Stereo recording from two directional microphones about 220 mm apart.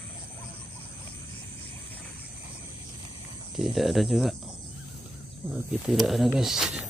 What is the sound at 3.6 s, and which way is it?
Speech, centre (ahead or behind).